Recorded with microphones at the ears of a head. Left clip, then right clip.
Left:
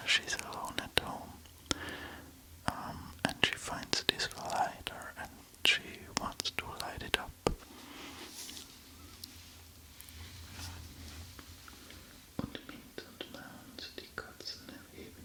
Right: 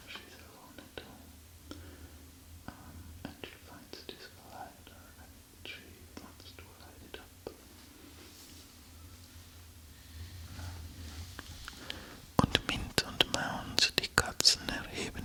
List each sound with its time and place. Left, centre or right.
0.0 s whispering: left
7.9 s a sound: left
11.3 s whispering: right